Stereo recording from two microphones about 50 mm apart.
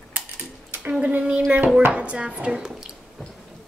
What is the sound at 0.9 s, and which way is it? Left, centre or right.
Speech, right.